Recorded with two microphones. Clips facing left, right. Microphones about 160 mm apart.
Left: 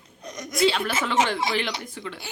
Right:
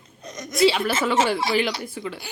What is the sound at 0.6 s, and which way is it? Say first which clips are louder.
A woman's voice: right 3 dB; 5° right (ahead or behind).